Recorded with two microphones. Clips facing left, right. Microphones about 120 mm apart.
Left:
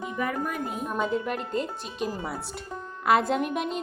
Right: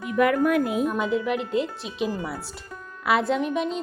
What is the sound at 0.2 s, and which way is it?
Speech, 90° right.